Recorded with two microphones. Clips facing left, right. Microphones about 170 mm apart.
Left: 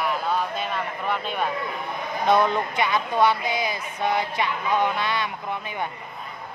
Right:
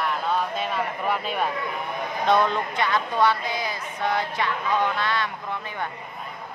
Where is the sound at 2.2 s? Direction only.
10° left (ahead or behind).